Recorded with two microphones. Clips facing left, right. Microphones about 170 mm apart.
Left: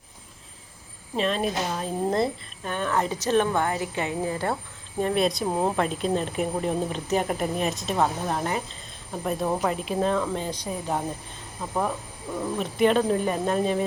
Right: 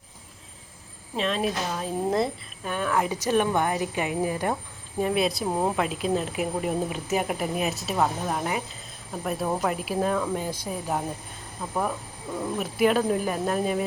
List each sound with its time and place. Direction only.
1.1 s a woman's voice: centre (ahead or behind)